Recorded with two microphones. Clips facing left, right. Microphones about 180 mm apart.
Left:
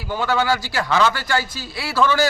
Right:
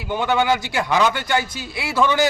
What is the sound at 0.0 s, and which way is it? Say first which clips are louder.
A man's voice: right 1 dB; 20° right (ahead or behind).